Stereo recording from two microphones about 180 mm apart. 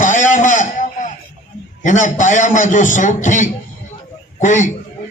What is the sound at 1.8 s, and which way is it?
A man's voice, 45° left (ahead or behind).